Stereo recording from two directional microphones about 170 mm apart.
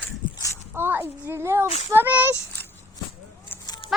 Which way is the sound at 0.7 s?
10° right (ahead or behind).